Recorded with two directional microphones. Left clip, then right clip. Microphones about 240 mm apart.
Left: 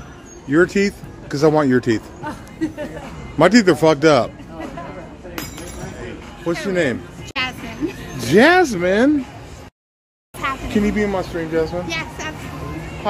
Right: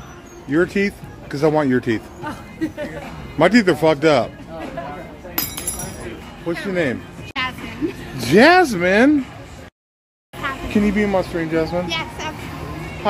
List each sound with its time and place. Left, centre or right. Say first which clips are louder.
0.5 s speech: left 3 dB; centre
2.2 s speech: left 1 dB; centre
3.3 s speech: left 2 dB; centre
6.6 s speech: left 1 dB; centre
7.3 s music: left 1 dB; left
8.2 s speech: right 1 dB; centre
10.7 s speech: right 3 dB; centre
11.9 s a sound: right 1 dB; centre